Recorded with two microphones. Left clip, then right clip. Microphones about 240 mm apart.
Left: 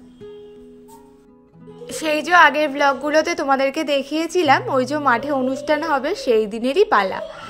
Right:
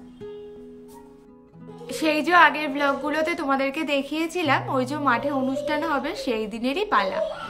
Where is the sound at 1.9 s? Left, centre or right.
Left.